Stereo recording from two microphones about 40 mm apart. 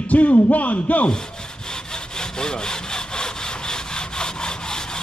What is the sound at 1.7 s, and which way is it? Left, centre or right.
Sawing, centre.